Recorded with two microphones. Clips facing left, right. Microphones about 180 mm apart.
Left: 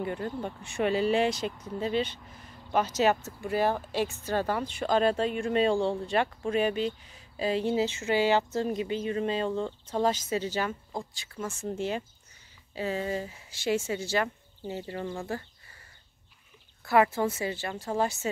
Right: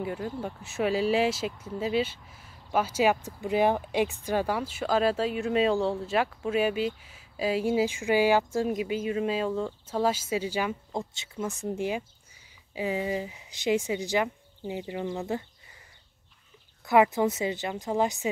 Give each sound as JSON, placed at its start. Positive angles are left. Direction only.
{"t": 0.0, "sound": "speech", "side_deg": -5}
{"t": 10.9, "sound": "speech", "side_deg": -25}
{"t": 16.8, "sound": "speech", "side_deg": -15}